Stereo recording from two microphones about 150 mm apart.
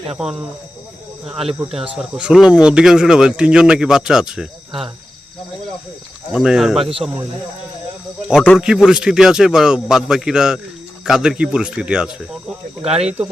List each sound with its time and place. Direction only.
0.2 s speech: 5° right (ahead or behind)
6.4 s speech: 5° right (ahead or behind)
8.5 s speech: 5° right (ahead or behind)
12.8 s speech: 45° right (ahead or behind)